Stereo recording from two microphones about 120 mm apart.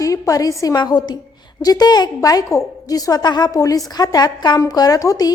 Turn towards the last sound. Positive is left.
turn(degrees=30)  # may be behind; listen again after turning